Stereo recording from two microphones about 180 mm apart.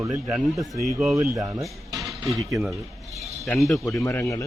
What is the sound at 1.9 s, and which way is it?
Music, centre (ahead or behind).